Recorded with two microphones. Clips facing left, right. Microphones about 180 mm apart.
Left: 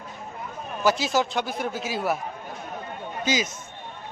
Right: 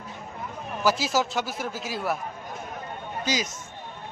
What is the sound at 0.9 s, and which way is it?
Speech, centre (ahead or behind).